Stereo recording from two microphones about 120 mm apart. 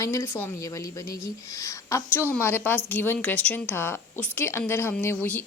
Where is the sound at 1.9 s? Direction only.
20° left (ahead or behind).